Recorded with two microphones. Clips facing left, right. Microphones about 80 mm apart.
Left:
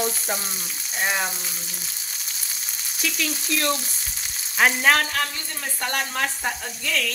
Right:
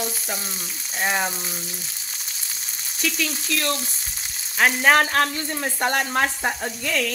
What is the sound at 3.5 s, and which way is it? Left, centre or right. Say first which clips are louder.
Speech: left 2 dB; centre.